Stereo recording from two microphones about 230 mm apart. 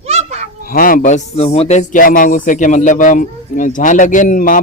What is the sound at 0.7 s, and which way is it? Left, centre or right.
Speech, left.